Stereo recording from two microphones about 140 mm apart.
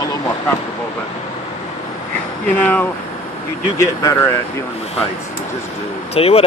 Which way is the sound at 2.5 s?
10° left (ahead or behind).